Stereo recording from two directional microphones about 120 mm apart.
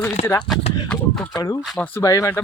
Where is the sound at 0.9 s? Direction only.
10° left (ahead or behind).